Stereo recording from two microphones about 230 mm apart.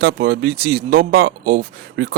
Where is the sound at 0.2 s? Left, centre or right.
Right.